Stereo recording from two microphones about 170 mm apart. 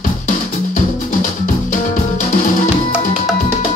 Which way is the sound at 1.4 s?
50° left (ahead or behind).